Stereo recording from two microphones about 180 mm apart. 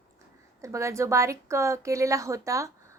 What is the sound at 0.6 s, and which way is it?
Speech, 15° right (ahead or behind).